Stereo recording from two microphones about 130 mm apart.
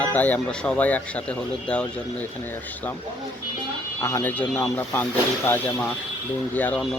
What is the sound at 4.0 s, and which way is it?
A man's voice, 20° left (ahead or behind).